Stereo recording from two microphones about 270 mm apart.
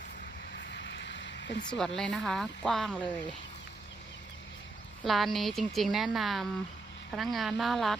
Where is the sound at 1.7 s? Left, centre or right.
Centre.